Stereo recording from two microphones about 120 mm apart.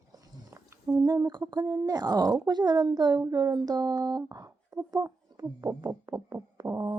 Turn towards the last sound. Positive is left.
turn(degrees=-30)  # may be behind; listen again after turning